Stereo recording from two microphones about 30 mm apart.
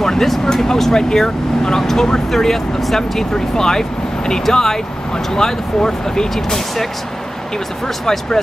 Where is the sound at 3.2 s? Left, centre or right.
Centre.